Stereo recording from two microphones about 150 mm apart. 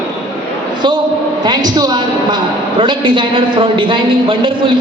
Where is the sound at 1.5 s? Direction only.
25° right (ahead or behind).